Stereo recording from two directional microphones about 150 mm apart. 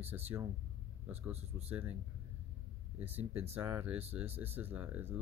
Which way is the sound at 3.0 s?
10° right (ahead or behind).